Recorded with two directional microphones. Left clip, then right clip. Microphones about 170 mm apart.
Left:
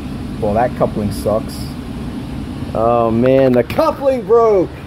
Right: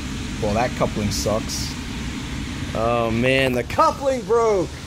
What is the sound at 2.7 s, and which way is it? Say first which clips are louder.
Speech: left 7 dB; centre (ahead or behind).